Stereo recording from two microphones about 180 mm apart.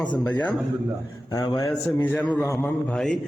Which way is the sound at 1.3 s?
20° left (ahead or behind).